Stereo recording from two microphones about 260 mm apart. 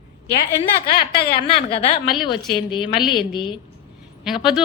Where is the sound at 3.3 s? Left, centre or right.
Centre.